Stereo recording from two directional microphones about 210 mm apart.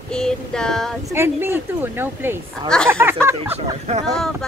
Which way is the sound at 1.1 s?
10° right (ahead or behind).